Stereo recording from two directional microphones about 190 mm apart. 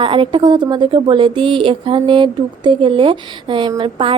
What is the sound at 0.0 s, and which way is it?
A woman's voice, 25° right (ahead or behind).